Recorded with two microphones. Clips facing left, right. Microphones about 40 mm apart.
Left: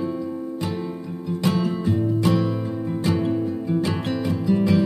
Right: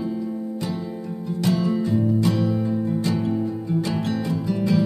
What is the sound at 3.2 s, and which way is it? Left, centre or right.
Music, left.